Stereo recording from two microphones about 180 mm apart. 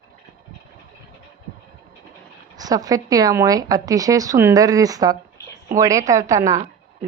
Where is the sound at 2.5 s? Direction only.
20° right (ahead or behind).